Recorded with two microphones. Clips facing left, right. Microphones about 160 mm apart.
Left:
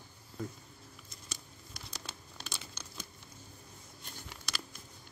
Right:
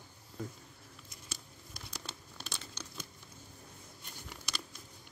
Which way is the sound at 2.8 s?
10° left (ahead or behind).